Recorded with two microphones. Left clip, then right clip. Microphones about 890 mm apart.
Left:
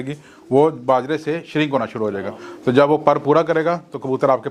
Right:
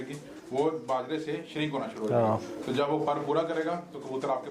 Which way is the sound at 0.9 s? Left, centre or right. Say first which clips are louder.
Left 13 dB; left.